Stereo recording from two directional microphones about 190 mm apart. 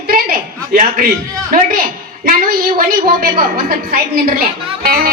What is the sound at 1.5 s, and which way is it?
A woman's voice, 50° right (ahead or behind).